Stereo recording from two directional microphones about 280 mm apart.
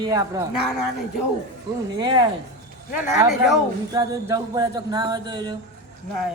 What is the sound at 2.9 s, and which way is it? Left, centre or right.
A man's voice, centre.